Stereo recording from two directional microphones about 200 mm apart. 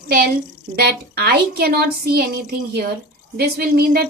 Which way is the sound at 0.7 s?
50° right (ahead or behind).